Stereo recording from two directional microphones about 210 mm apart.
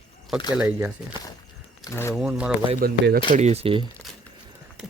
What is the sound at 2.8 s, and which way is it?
Speech, 45° right (ahead or behind).